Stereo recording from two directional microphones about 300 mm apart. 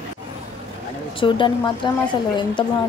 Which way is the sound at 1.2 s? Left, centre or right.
Centre.